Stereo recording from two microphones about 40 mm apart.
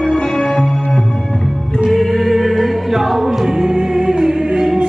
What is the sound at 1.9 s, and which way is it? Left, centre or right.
Choir, centre.